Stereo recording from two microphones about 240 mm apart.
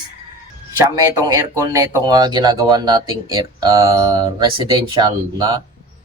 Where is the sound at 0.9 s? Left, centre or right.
Centre.